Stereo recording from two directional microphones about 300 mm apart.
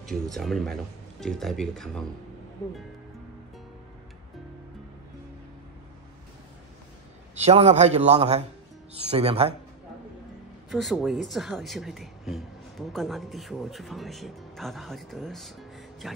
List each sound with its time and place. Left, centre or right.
0.0 s speech: centre
7.3 s a man's voice: right
10.7 s speech: centre